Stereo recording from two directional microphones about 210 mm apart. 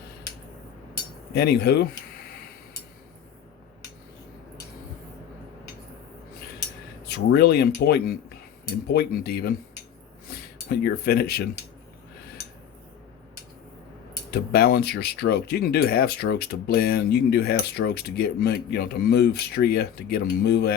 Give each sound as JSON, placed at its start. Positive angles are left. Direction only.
{"t": 1.3, "sound": "speech", "side_deg": 50}
{"t": 7.3, "sound": "speech", "side_deg": 50}
{"t": 14.3, "sound": "speech", "side_deg": 50}